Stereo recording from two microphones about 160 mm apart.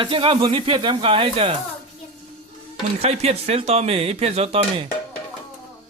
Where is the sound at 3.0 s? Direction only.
40° right (ahead or behind).